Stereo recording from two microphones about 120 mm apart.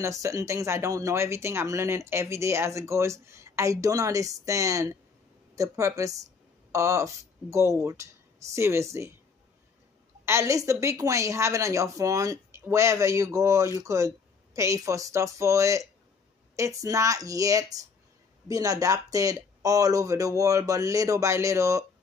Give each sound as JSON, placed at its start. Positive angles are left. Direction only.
{"t": 0.0, "sound": "speech", "side_deg": -25}
{"t": 10.2, "sound": "speech", "side_deg": -25}